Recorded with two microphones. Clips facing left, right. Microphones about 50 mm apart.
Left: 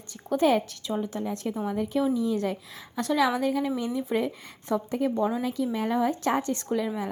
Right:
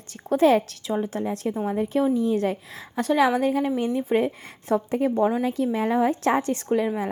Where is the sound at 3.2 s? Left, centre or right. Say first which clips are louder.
Right 4 dB; right.